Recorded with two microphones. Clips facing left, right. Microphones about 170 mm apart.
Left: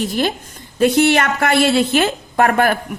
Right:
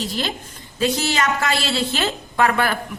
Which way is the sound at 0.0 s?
50° left (ahead or behind).